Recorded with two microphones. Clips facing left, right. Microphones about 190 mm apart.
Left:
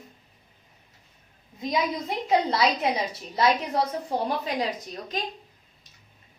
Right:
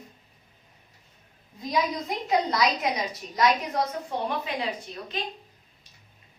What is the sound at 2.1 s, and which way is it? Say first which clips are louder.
A woman's voice: left 2 dB; 30° left (ahead or behind).